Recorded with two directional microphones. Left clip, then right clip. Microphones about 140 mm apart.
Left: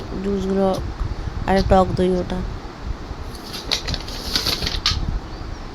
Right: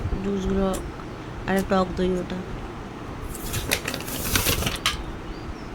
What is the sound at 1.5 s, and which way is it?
Speech, 30° left (ahead or behind).